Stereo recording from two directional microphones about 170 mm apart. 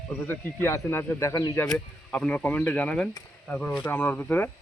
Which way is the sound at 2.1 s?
5° left (ahead or behind).